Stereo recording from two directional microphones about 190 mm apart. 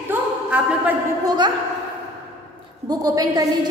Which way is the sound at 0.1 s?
10° right (ahead or behind).